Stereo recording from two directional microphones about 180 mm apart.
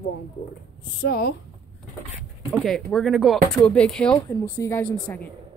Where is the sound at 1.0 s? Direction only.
60° left (ahead or behind).